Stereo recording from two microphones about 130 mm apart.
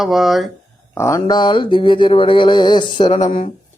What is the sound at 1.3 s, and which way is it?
Speech, 35° left (ahead or behind).